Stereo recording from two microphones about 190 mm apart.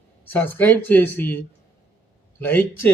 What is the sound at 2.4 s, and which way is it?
Speech, 10° left (ahead or behind).